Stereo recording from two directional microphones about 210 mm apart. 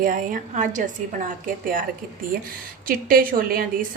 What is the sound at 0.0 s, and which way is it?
A woman's voice, 40° right (ahead or behind).